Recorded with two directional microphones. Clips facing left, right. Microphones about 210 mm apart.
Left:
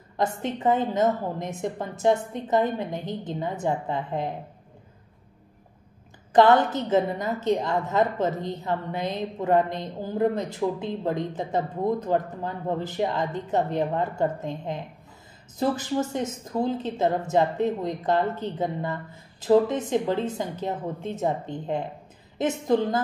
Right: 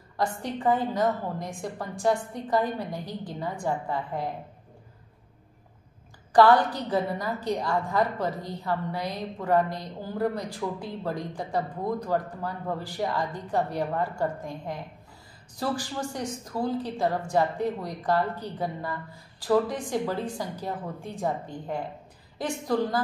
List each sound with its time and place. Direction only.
0.2 s a woman's voice: 20° left (ahead or behind)
6.3 s a woman's voice: 20° left (ahead or behind)